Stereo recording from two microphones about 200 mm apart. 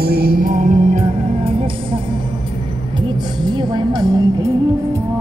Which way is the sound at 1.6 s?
25° right (ahead or behind).